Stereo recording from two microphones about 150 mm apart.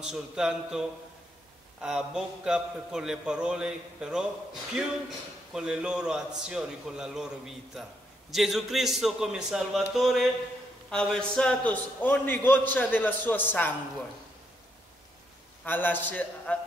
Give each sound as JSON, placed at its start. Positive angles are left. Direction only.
{"t": 0.0, "sound": "a man's voice", "side_deg": -5}
{"t": 5.5, "sound": "a man's voice", "side_deg": -5}
{"t": 15.6, "sound": "a man's voice", "side_deg": 10}